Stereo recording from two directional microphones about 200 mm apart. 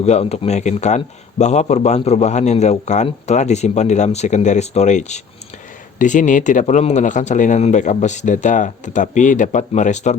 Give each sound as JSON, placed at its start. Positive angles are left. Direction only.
{"t": 0.0, "sound": "a man's voice", "side_deg": 30}